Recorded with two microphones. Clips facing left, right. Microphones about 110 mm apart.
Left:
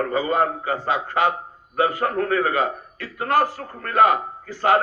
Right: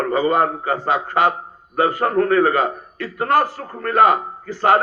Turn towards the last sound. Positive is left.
turn(degrees=-40)  # may be behind; listen again after turning